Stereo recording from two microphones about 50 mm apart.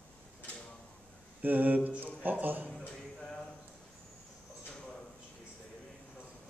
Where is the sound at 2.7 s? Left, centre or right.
Centre.